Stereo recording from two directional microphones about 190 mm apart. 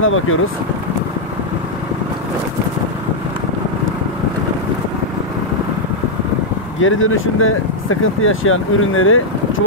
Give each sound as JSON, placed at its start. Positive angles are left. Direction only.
{"t": 0.0, "sound": "speech", "side_deg": 90}
{"t": 6.8, "sound": "speech", "side_deg": 90}